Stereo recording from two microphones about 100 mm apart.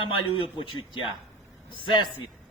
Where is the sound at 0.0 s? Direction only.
60° left (ahead or behind).